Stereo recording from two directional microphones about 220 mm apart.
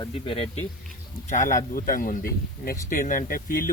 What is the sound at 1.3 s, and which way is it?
Speech, 35° left (ahead or behind).